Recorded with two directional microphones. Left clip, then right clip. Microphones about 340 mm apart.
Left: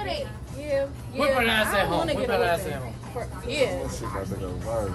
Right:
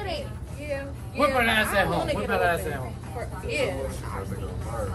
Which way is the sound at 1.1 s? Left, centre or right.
Centre.